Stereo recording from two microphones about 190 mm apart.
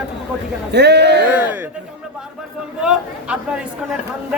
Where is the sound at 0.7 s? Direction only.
60° right (ahead or behind).